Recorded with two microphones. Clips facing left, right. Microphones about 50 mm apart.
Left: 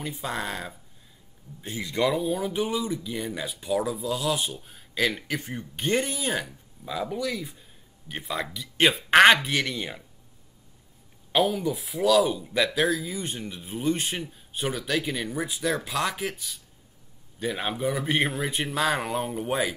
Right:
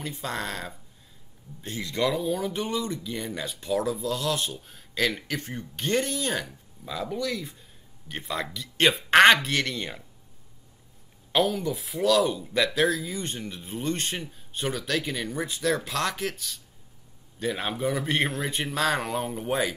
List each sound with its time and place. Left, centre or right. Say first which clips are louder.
0.0 s speech: left 1 dB; centre
11.3 s speech: left 1 dB; centre